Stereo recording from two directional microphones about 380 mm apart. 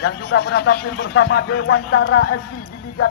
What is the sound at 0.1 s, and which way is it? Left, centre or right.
Speech, left.